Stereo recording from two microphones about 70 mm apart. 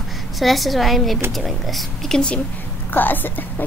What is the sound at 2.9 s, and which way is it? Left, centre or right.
Speech, left.